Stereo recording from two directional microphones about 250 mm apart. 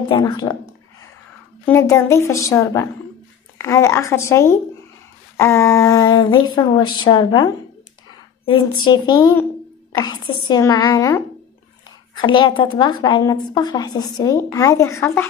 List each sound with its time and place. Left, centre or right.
0.1 s speech: centre
1.7 s a woman's voice: centre